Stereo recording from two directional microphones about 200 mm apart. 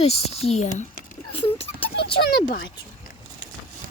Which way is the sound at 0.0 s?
30° left (ahead or behind).